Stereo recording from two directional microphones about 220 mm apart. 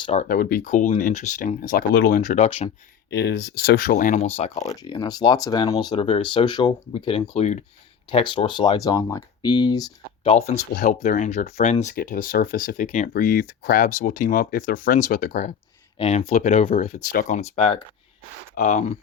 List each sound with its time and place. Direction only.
0.0 s speech: 30° left (ahead or behind)
3.1 s speech: 50° left (ahead or behind); by 4.6 s 30° left (ahead or behind)
4.6 s speech: 15° left (ahead or behind)
10.3 s speech: 30° left (ahead or behind)